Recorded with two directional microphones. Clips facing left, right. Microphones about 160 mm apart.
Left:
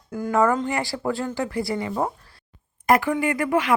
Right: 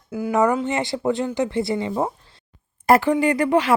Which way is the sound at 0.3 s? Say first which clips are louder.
Right 1 dB; 20° right (ahead or behind).